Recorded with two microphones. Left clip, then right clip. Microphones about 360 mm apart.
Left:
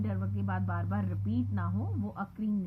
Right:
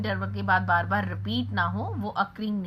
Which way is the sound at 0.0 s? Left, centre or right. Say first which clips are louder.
Right 9 dB; centre.